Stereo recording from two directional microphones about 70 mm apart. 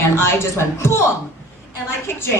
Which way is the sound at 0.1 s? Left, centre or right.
Left.